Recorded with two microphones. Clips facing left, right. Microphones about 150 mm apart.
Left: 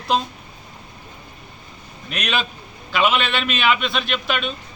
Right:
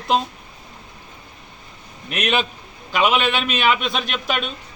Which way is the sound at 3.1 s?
10° right (ahead or behind).